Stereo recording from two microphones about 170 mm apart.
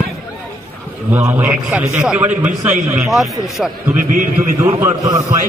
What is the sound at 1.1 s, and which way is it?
A man's voice, 10° right (ahead or behind).